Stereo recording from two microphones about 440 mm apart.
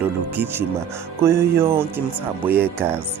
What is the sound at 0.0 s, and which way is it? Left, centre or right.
Speech, centre.